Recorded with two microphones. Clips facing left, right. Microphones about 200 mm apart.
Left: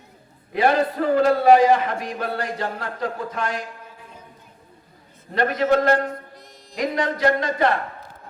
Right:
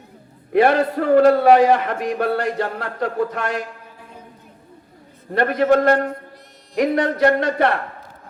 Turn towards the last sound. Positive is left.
turn(degrees=-65)  # may be behind; listen again after turning